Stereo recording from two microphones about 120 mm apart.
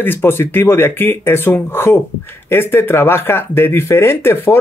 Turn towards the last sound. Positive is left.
turn(degrees=20)  # may be behind; listen again after turning